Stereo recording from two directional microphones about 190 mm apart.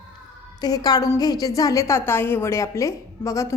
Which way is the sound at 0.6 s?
20° left (ahead or behind).